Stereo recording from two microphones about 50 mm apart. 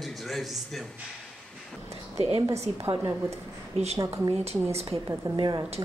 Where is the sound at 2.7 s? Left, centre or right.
Right.